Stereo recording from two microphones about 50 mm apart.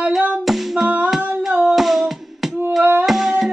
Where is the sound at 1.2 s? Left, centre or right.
Right.